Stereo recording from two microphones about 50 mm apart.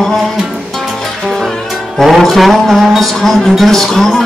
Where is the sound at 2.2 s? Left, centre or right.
Centre.